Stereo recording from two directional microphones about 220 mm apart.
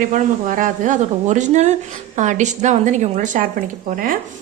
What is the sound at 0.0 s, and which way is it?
A woman's voice, 35° right (ahead or behind).